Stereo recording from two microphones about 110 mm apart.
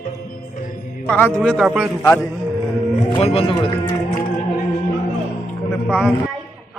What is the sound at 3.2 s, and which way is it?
Speech, 60° left (ahead or behind).